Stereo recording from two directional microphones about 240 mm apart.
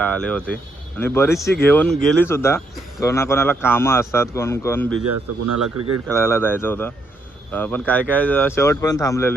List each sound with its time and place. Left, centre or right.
0.0 s a man's voice: centre
5.1 s a man's voice: right
6.1 s a man's voice: centre